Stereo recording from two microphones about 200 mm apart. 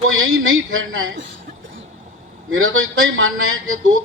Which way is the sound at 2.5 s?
90° right.